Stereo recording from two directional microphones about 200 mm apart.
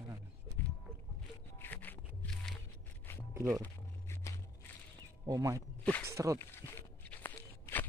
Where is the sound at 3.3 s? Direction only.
15° right (ahead or behind).